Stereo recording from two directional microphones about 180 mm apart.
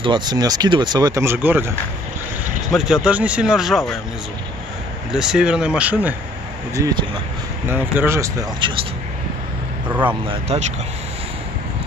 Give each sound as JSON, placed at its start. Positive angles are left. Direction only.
{"t": 0.0, "sound": "speech", "side_deg": -25}
{"t": 2.7, "sound": "speech", "side_deg": -5}
{"t": 5.1, "sound": "speech", "side_deg": -5}
{"t": 6.7, "sound": "speech", "side_deg": -20}